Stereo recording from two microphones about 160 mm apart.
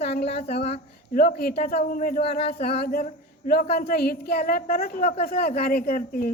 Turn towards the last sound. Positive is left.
turn(degrees=65)  # may be behind; listen again after turning